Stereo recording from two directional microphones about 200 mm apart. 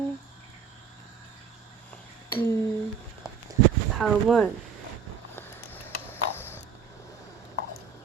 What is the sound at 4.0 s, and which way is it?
Speech, centre (ahead or behind).